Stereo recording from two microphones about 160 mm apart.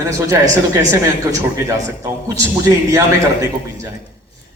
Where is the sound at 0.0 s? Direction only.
20° right (ahead or behind).